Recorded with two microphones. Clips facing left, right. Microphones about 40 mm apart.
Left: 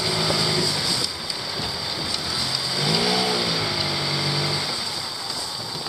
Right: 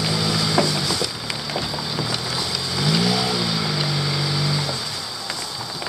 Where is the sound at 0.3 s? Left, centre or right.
Centre.